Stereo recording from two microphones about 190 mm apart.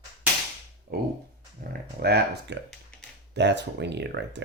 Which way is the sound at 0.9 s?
55° right (ahead or behind).